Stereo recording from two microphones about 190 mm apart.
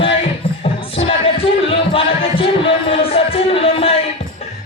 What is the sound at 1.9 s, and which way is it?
Music, 30° left (ahead or behind).